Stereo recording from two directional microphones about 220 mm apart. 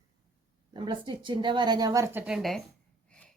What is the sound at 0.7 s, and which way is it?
A woman's voice, 20° right (ahead or behind).